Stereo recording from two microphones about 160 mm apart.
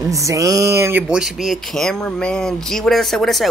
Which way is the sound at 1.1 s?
5° right (ahead or behind).